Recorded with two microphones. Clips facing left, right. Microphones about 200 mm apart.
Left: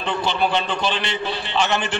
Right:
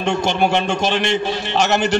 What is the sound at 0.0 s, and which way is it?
A man's voice, 50° right (ahead or behind).